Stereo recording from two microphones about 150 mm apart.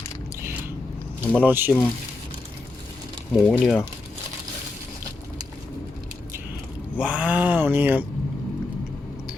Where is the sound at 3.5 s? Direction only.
10° left (ahead or behind).